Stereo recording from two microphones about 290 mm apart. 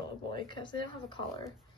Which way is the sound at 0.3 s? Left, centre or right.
Centre.